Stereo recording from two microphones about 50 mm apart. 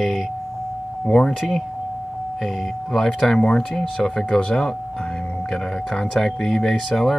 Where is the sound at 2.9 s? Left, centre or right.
Centre.